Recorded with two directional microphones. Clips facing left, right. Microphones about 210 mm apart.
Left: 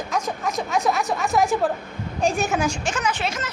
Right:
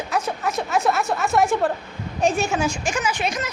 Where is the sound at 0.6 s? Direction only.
Centre (ahead or behind).